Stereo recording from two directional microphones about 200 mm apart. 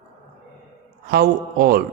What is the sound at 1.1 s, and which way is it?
Speech, 50° right (ahead or behind).